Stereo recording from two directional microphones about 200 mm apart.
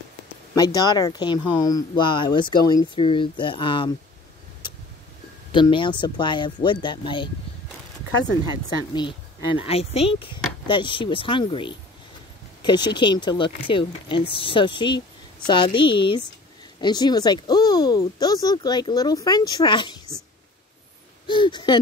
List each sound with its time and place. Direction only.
0.6 s speech: 20° left (ahead or behind)
5.5 s speech: 25° left (ahead or behind)
9.6 s speech: 30° left (ahead or behind)
21.3 s speech: 25° left (ahead or behind)